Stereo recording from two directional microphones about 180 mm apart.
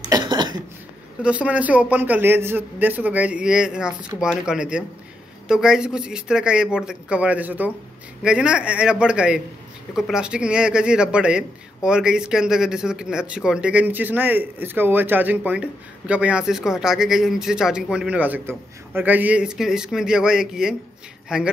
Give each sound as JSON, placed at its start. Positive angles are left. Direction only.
{"t": 0.1, "sound": "cough", "side_deg": -25}
{"t": 1.2, "sound": "a man's voice", "side_deg": -5}